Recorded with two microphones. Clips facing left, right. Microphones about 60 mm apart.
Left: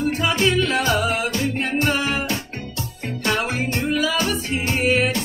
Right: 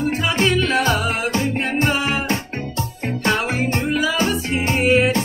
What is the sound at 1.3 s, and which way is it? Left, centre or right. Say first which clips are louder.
Music: right 2 dB; right.